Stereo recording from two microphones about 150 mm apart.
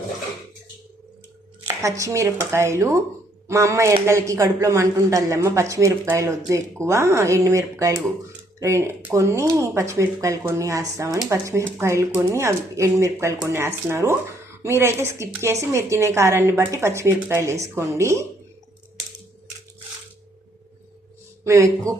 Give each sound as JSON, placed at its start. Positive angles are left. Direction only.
{"t": 1.6, "sound": "a woman's voice", "side_deg": -20}
{"t": 21.4, "sound": "speech", "side_deg": -20}